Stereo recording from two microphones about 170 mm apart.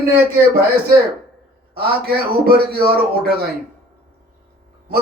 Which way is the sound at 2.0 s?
65° right (ahead or behind).